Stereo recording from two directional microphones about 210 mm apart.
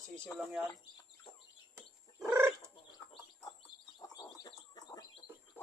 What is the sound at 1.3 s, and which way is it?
Bird, 25° left (ahead or behind).